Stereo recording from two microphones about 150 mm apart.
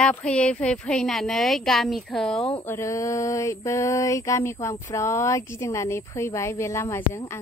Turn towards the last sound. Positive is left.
turn(degrees=15)  # may be behind; listen again after turning